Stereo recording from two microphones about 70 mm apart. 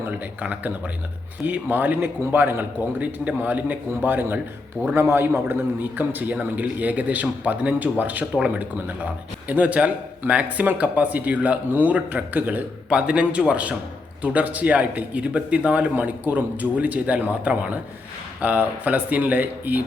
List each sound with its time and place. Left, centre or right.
0.4 s a man's voice: right
8.3 s speech: centre